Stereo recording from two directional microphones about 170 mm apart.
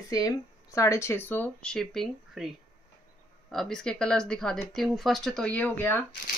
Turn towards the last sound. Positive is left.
turn(degrees=10)  # may be behind; listen again after turning